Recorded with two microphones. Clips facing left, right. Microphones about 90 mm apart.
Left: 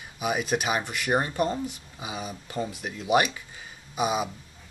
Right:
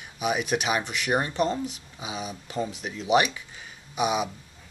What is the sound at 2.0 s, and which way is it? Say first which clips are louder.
Speech: right 1 dB; 5° right (ahead or behind).